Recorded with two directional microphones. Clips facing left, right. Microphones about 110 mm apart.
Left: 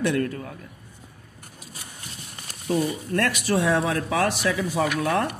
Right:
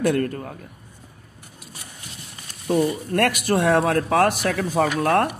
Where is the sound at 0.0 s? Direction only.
45° right (ahead or behind).